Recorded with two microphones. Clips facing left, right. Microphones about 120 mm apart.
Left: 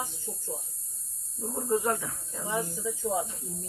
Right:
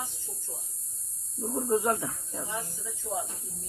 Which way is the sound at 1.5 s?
20° right (ahead or behind).